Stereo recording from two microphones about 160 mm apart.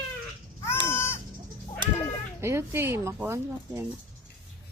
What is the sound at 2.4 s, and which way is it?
Speech, 15° right (ahead or behind).